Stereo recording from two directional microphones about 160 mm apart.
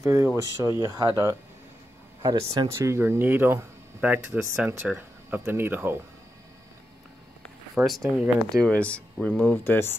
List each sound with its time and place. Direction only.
0.0 s speech: 20° right (ahead or behind)
7.7 s speech: centre (ahead or behind)